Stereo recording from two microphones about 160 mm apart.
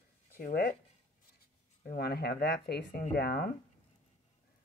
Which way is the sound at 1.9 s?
80° left.